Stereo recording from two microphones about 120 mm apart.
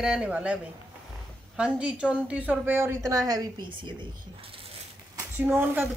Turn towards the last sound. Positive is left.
turn(degrees=-20)  # may be behind; listen again after turning